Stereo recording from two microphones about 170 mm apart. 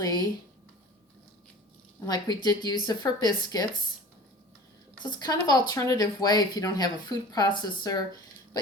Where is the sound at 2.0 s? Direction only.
25° left (ahead or behind).